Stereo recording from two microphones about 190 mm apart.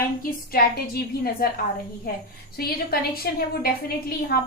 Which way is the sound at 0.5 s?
55° left (ahead or behind).